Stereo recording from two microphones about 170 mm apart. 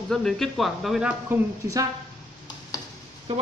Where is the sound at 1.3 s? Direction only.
20° right (ahead or behind).